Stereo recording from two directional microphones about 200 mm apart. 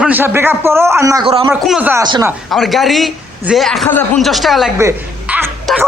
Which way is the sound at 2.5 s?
Centre (ahead or behind).